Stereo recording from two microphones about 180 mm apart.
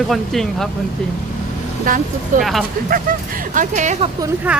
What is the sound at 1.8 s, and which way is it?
Speech, 45° right (ahead or behind).